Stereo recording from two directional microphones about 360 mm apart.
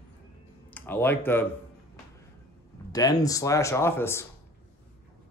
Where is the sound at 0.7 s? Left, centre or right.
Centre.